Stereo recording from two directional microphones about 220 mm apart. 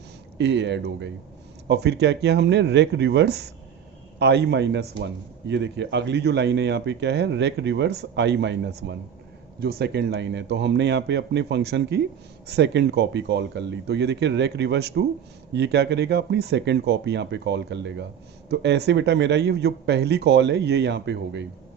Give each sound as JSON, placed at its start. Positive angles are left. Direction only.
{"t": 0.3, "sound": "a man's voice", "side_deg": -50}